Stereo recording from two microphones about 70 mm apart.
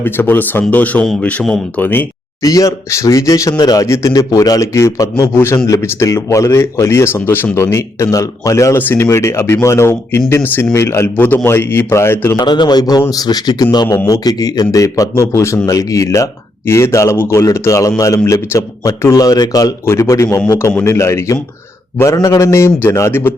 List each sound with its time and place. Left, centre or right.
0.0 s speech: left
2.4 s speech: left
3.6 s speech: left
3.8 s speech: left
4.1 s speech: left
5.3 s speech: left
5.6 s speech: left
12.4 s a man's voice: left
13.1 s a man's voice: left
14.1 s speech: left
17.4 s speech: left
19.1 s speech: left
19.9 s speech: left
22.0 s speech: left